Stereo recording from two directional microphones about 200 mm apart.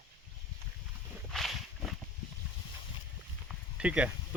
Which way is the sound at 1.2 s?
Centre (ahead or behind).